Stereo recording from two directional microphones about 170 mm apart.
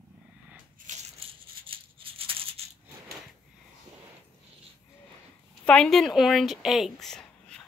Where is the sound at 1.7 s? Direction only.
30° right (ahead or behind).